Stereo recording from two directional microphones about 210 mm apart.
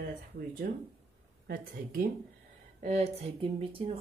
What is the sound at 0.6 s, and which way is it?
Speech, 45° right (ahead or behind).